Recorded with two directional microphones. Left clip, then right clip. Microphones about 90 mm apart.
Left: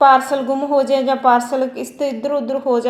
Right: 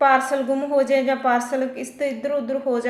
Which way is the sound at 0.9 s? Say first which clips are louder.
Left 3 dB; 30° left (ahead or behind).